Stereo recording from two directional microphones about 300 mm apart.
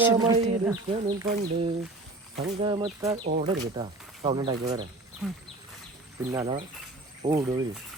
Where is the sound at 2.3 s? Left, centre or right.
Centre.